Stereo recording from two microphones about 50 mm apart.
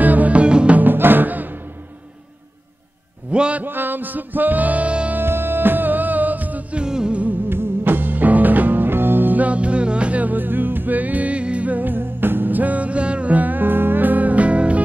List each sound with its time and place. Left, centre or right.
0.0 s music: right
0.7 s music: right
3.3 s a sound: right
3.6 s music: right
5.1 s music: right
6.8 s music: centre
7.4 s music: right